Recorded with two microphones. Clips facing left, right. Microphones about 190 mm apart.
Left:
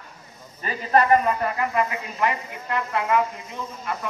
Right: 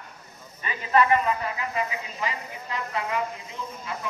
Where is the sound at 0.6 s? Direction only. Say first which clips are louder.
Left 2 dB; 40° left (ahead or behind); by 3.9 s 55° left (ahead or behind).